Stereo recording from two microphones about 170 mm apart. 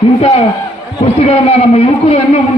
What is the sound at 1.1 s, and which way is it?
A man's voice, 40° left (ahead or behind).